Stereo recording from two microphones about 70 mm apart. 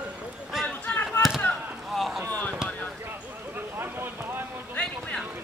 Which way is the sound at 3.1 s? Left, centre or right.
Right.